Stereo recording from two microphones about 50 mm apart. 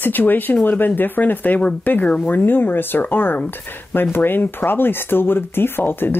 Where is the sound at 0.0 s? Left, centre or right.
Left.